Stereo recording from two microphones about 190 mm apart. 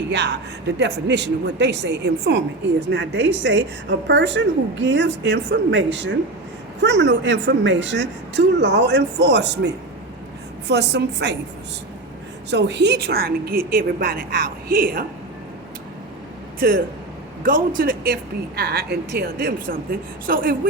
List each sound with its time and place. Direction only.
0.1 s a woman's voice: 65° right (ahead or behind)
12.5 s speech: 65° right (ahead or behind); by 15.0 s 50° right (ahead or behind)
16.6 s speech: 50° right (ahead or behind)